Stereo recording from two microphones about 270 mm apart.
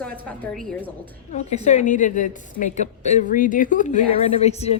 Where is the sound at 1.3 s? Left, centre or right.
Left.